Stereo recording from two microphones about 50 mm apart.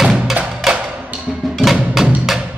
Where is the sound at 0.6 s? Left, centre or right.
Centre.